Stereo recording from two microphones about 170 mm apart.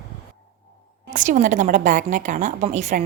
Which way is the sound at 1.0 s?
55° right (ahead or behind).